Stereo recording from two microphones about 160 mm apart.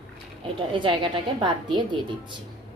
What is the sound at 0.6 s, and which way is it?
A woman's voice, 30° right (ahead or behind).